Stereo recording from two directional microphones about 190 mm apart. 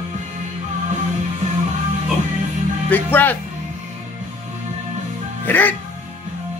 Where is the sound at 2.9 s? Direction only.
10° left (ahead or behind).